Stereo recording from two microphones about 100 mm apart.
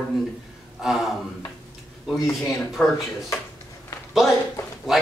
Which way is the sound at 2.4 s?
Centre (ahead or behind).